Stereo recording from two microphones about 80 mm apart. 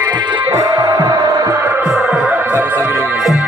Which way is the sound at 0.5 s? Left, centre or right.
Right.